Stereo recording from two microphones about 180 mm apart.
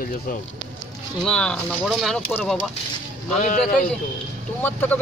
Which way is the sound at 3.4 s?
45° left (ahead or behind).